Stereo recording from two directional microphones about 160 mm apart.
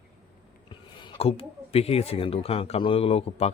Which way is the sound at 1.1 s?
35° left (ahead or behind).